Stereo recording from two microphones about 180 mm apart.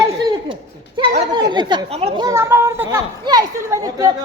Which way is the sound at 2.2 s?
15° right (ahead or behind).